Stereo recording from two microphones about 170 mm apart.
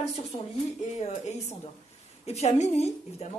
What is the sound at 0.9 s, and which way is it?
A woman's voice, 40° left (ahead or behind).